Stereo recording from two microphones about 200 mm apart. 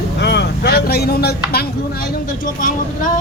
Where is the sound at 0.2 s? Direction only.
60° left (ahead or behind).